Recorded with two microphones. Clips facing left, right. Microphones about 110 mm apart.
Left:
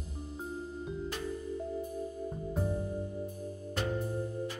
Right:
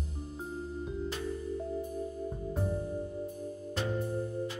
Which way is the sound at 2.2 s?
Centre (ahead or behind).